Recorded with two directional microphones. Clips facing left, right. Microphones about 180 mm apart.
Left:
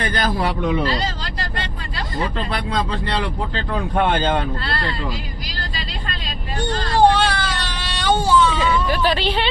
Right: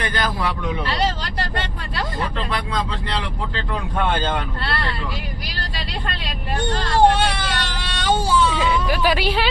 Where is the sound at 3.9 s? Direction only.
20° left (ahead or behind).